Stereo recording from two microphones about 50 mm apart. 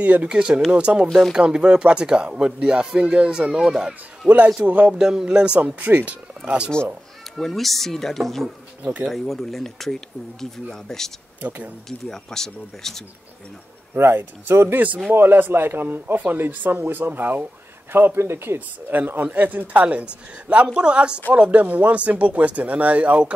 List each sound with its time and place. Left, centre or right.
0.0 s a man's voice: right
0.3 s speech: centre
4.6 s a man's voice: right
4.9 s speech: centre
5.8 s speech: right
6.0 s speech: right
7.3 s speech: centre
11.4 s a man's voice: right
12.1 s speech: centre
13.9 s a man's voice: right
18.9 s a man's voice: right